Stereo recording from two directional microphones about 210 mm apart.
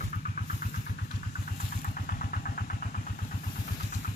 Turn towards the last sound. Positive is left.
turn(degrees=40)  # may be behind; listen again after turning